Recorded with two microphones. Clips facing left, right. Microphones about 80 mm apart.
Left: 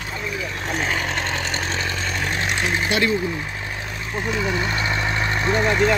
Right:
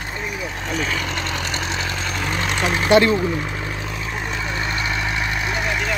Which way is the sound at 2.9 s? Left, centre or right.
Right.